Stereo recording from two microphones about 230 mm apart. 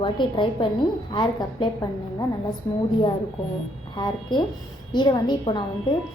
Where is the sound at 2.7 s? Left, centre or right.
Centre.